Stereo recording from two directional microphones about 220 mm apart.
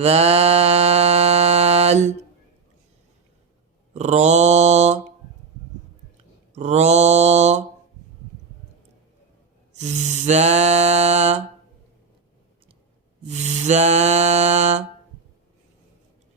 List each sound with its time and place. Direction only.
0.0 s music: 30° right (ahead or behind)
3.9 s mantra: 30° right (ahead or behind)
6.5 s mantra: 30° right (ahead or behind)
9.7 s a sound: 30° right (ahead or behind)
13.2 s music: 30° right (ahead or behind)